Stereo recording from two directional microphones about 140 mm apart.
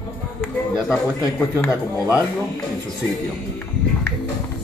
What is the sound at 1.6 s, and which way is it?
Speech, 20° left (ahead or behind).